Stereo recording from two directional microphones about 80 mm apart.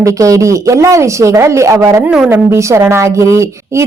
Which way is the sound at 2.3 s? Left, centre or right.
Right.